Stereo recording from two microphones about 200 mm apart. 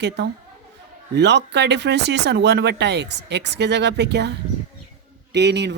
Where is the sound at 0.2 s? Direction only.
60° right (ahead or behind).